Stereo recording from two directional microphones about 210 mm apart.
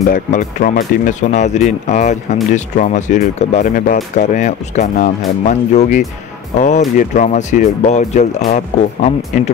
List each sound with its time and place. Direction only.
0.0 s speech: 40° left (ahead or behind)